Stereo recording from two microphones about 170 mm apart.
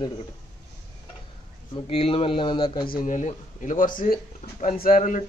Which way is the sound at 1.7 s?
35° left (ahead or behind).